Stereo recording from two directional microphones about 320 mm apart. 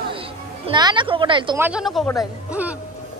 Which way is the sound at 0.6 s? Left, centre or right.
Centre.